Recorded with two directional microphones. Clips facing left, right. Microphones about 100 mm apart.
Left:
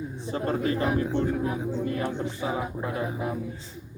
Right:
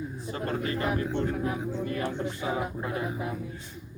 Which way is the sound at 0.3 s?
25° left (ahead or behind).